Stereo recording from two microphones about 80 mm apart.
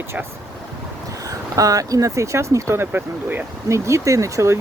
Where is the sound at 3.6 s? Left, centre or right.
Right.